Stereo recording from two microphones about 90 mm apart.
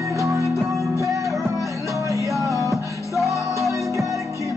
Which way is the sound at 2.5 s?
40° left (ahead or behind).